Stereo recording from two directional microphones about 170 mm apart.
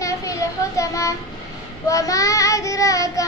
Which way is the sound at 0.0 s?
20° left (ahead or behind).